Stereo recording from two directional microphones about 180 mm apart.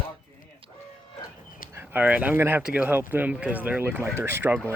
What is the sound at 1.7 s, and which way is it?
Speech, 10° right (ahead or behind).